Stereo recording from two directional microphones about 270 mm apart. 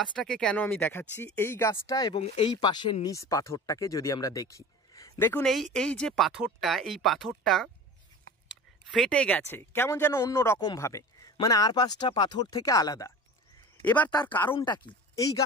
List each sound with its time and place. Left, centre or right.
0.1 s speech: centre
8.8 s speech: centre